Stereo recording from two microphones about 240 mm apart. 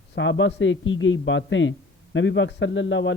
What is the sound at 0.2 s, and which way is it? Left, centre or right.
A man's voice, left.